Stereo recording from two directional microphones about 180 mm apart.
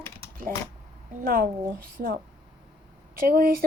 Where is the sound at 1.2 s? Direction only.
55° right (ahead or behind).